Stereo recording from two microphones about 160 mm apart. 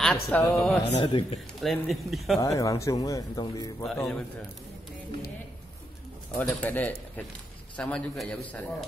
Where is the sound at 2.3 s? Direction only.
20° left (ahead or behind).